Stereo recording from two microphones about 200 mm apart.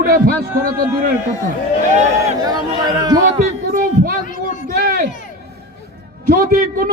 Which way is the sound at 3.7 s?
45° right (ahead or behind).